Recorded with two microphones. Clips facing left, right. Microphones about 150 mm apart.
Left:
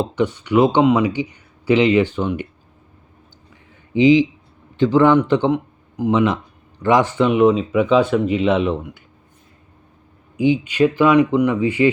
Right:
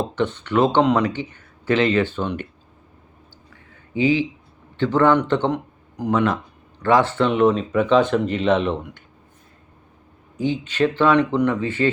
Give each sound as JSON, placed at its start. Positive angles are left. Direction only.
{"t": 0.0, "sound": "speech", "side_deg": 10}
{"t": 3.9, "sound": "speech", "side_deg": 15}
{"t": 10.3, "sound": "speech", "side_deg": 10}